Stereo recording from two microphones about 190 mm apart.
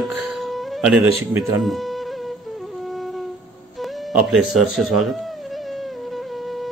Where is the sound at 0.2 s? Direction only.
Centre (ahead or behind).